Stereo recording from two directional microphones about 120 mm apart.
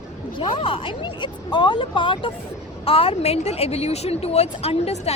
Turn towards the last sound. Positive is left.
turn(degrees=60)  # may be behind; listen again after turning